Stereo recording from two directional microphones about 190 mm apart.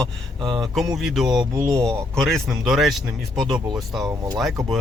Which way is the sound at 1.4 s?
20° right (ahead or behind).